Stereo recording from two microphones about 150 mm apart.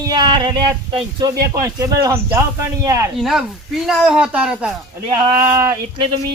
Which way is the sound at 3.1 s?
Centre (ahead or behind).